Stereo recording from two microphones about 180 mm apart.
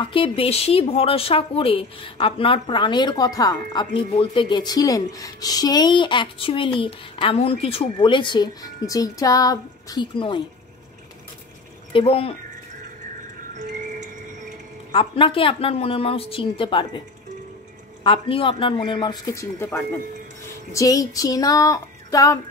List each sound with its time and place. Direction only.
0.0 s speech: 30° left (ahead or behind)
11.9 s a woman's voice: 30° left (ahead or behind)
13.6 s music: 45° right (ahead or behind)
14.9 s a woman's voice: 30° left (ahead or behind)
18.0 s speech: 30° left (ahead or behind); by 20.0 s 15° left (ahead or behind)
20.4 s child singing: 15° left (ahead or behind)